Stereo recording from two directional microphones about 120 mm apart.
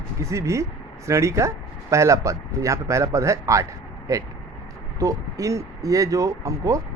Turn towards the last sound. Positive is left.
turn(degrees=-25)  # may be behind; listen again after turning